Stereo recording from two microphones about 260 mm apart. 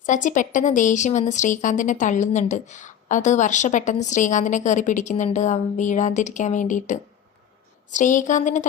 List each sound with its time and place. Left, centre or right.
0.0 s a woman's voice: left